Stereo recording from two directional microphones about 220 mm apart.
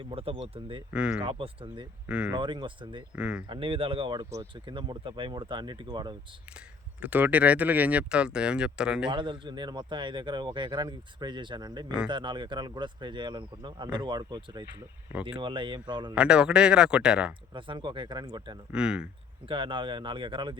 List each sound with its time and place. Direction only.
0.0 s speech: 25° right (ahead or behind)
0.9 s speech: 5° right (ahead or behind)
1.2 s speech: 25° right (ahead or behind)
2.0 s speech: 5° right (ahead or behind)
2.3 s speech: 20° right (ahead or behind)
3.2 s speech: 5° right (ahead or behind)
3.5 s speech: 25° right (ahead or behind)
7.0 s speech: 5° right (ahead or behind)
9.0 s speech: 20° right (ahead or behind)
16.1 s speech: 5° right (ahead or behind)
17.5 s speech: 20° right (ahead or behind)
18.7 s speech: 5° right (ahead or behind)
19.5 s speech: 25° right (ahead or behind)